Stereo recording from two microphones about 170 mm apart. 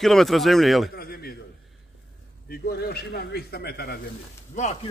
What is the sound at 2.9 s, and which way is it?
A man's voice, 70° left (ahead or behind).